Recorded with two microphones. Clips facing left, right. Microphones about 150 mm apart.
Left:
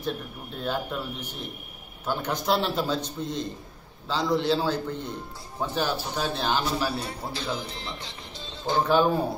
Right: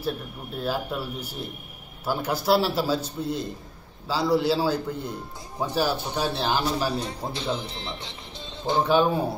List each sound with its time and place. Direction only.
0.6 s a man's voice: 5° right (ahead or behind)
7.0 s speech: 20° right (ahead or behind)
8.8 s speech: centre (ahead or behind)